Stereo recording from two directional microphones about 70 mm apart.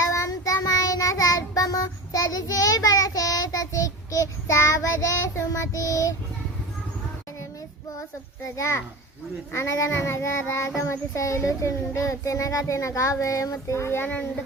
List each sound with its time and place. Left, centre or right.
0.0 s child singing: left
8.5 s a child's voice: left
9.5 s child singing: left
10.8 s a child's voice: left